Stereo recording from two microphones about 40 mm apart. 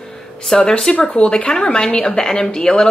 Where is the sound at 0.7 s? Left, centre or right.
Centre.